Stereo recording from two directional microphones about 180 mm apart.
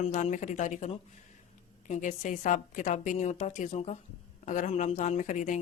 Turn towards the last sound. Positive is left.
turn(degrees=45)  # may be behind; listen again after turning